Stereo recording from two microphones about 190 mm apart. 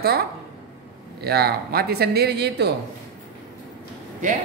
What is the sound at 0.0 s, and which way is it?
Speech, 55° right (ahead or behind).